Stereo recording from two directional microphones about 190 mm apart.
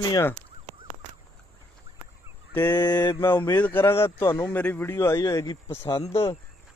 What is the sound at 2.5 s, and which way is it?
Speech, 10° left (ahead or behind).